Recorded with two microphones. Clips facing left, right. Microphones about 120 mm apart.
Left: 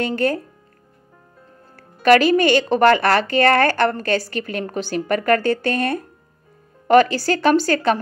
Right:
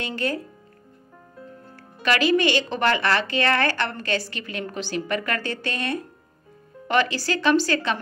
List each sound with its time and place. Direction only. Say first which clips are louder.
0.0 s speech: left 7 dB; 50° left (ahead or behind)
1.8 s speech: left 9 dB; 50° left (ahead or behind)